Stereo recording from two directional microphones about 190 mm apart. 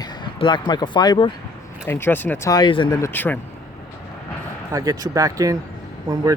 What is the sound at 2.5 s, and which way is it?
Speech, 25° left (ahead or behind).